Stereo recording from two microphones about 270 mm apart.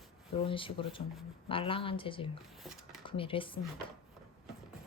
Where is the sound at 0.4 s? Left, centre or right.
Centre.